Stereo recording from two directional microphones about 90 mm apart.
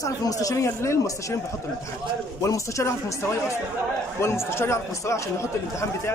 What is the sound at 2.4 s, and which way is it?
Speech, 35° left (ahead or behind).